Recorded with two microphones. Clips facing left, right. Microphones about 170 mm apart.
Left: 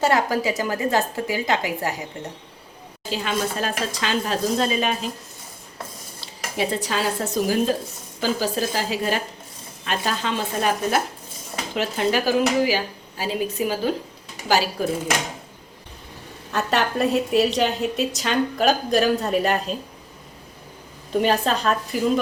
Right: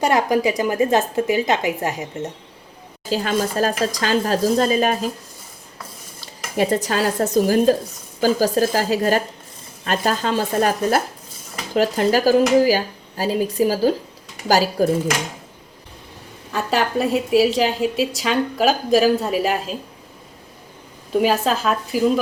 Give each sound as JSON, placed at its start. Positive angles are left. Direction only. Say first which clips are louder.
{"t": 0.0, "sound": "a woman's voice", "louder": "right 3 dB", "side_deg": -20}
{"t": 3.1, "sound": "speech", "louder": "right 4 dB", "side_deg": -40}
{"t": 6.6, "sound": "speech", "louder": "right 5 dB", "side_deg": -45}
{"t": 16.5, "sound": "a woman's voice", "louder": "right 2 dB", "side_deg": 0}
{"t": 21.1, "sound": "a woman's voice", "louder": "right 2 dB", "side_deg": -5}